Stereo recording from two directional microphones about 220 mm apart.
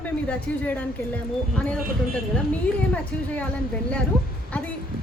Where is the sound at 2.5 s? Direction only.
5° left (ahead or behind).